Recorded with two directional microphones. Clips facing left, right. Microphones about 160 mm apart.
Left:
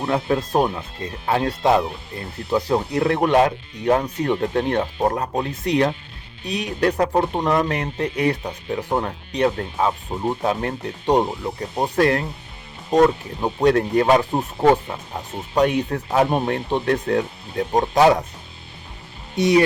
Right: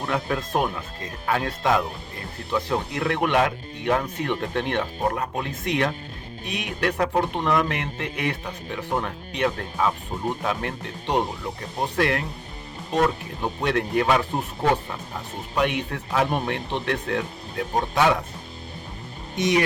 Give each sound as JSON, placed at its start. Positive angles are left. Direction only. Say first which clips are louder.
{"t": 0.0, "sound": "speech", "louder": "left 5 dB", "side_deg": 30}
{"t": 15.5, "sound": "speech", "louder": "left 6 dB", "side_deg": 40}
{"t": 19.4, "sound": "speech", "louder": "left 5 dB", "side_deg": 30}